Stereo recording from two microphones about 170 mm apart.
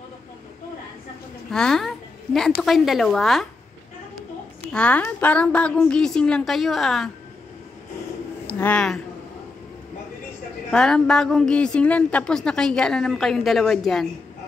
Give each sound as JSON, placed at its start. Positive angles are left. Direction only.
{"t": 1.5, "sound": "a woman's voice", "side_deg": 5}
{"t": 4.7, "sound": "a woman's voice", "side_deg": 10}
{"t": 8.5, "sound": "speech", "side_deg": 10}
{"t": 10.7, "sound": "a woman's voice", "side_deg": 5}